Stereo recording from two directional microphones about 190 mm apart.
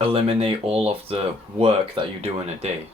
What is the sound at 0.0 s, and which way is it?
Speech, 30° right (ahead or behind).